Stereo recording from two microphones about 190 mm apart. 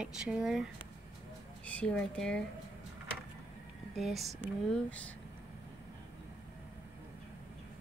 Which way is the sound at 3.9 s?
Centre (ahead or behind).